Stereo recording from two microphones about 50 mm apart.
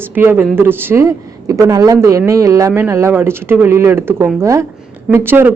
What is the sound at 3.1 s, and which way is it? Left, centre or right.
Speech, right.